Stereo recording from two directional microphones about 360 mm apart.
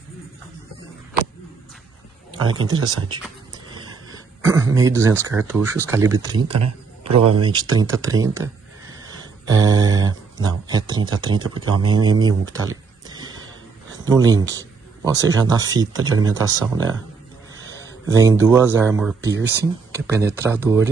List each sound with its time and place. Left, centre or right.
2.5 s a man's voice: centre
3.7 s throat clearing: centre
4.7 s a man's voice: centre
18.0 s a man's voice: centre